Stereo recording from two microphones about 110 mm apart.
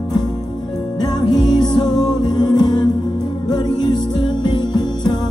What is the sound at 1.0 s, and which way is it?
Music, 40° left (ahead or behind).